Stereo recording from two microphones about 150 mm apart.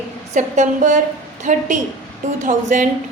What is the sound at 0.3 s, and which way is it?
A woman's voice, 55° right (ahead or behind).